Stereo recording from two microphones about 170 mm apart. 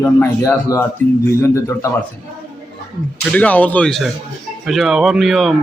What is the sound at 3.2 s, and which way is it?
Speech, 5° left (ahead or behind).